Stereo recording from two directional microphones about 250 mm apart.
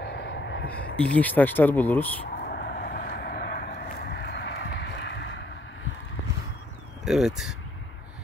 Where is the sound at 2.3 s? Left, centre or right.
Left.